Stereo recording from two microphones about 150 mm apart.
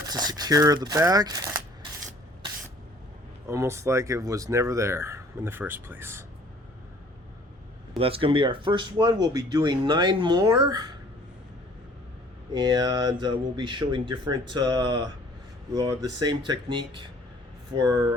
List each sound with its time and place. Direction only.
0.1 s speech: 25° right (ahead or behind)
3.4 s speech: 20° right (ahead or behind)
7.9 s speech: 40° right (ahead or behind)
12.5 s speech: 25° right (ahead or behind)